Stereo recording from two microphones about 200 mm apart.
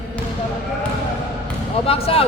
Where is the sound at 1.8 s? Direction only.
30° left (ahead or behind).